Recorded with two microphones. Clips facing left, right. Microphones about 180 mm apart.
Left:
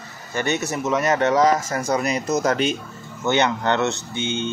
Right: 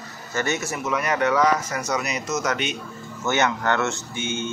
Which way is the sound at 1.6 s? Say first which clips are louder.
Left 4 dB; 30° left (ahead or behind).